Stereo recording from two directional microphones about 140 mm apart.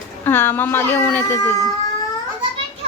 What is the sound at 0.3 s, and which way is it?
A woman's voice, 15° left (ahead or behind).